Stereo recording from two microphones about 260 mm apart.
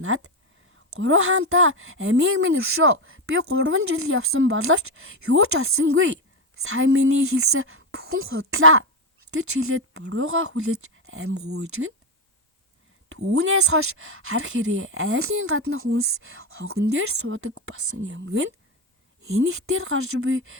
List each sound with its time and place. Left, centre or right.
0.0 s speech: right
13.1 s speech: right